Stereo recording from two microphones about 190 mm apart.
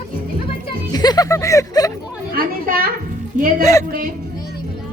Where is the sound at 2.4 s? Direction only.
50° right (ahead or behind).